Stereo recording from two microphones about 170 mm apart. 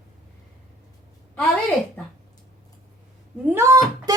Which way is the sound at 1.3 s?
5° left (ahead or behind).